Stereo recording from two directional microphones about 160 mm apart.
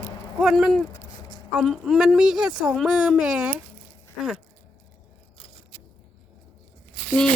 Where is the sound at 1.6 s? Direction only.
Centre (ahead or behind).